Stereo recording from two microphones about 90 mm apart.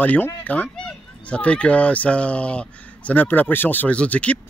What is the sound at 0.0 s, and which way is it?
Speech, 20° left (ahead or behind).